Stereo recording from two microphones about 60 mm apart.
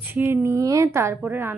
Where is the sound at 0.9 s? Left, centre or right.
Right.